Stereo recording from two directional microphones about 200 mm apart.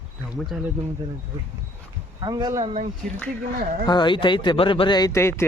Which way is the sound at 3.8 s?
20° left (ahead or behind).